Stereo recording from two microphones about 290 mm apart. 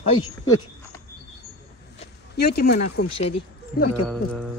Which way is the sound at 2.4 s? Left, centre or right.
Left.